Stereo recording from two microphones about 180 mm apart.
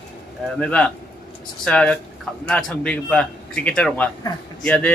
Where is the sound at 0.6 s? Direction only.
5° left (ahead or behind).